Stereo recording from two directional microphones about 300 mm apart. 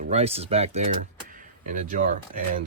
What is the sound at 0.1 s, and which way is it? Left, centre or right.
Speech, centre.